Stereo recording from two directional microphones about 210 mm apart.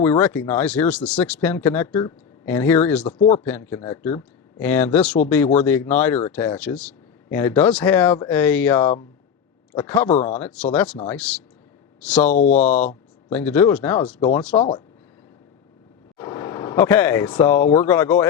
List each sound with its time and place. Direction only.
0.0 s speech: 10° left (ahead or behind)
3.2 s speech: 30° left (ahead or behind)
3.4 s speech: 10° left (ahead or behind)
12.3 s speech: 35° left (ahead or behind)
13.3 s speech: 10° left (ahead or behind)
14.5 s speech: 25° left (ahead or behind)
16.1 s vehicle: 15° left (ahead or behind)
17.5 s speech: 10° left (ahead or behind)